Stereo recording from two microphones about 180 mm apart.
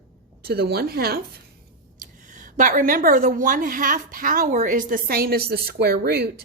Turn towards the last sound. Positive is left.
turn(degrees=-60)  # may be behind; listen again after turning